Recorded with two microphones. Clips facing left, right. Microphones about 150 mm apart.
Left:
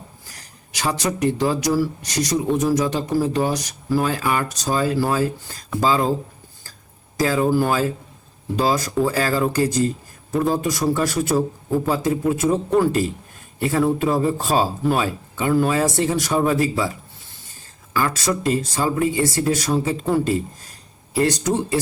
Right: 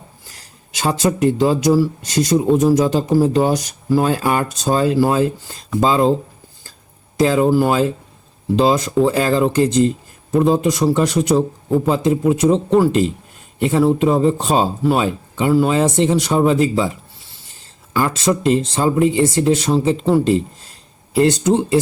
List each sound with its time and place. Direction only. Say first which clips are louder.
0.3 s speech: right 1 dB; 25° right (ahead or behind)
7.2 s speech: right 4 dB; 25° right (ahead or behind)
15.4 s speech: right 4 dB; 10° right (ahead or behind)
15.7 s speech: right 5 dB; 20° right (ahead or behind)
17.9 s speech: right 4 dB; 25° right (ahead or behind)